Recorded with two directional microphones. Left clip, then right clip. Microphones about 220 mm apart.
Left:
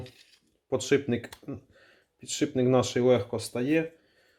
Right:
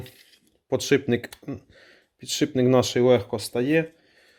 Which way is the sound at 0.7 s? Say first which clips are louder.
Right 4 dB; 45° right (ahead or behind).